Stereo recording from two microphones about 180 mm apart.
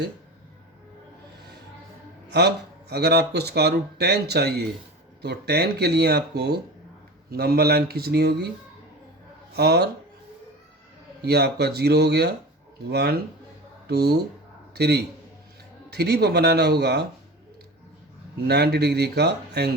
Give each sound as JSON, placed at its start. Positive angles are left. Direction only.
{"t": 2.9, "sound": "speech", "side_deg": -65}
{"t": 9.6, "sound": "speech", "side_deg": -65}
{"t": 11.2, "sound": "speech", "side_deg": -65}
{"t": 18.4, "sound": "speech", "side_deg": -65}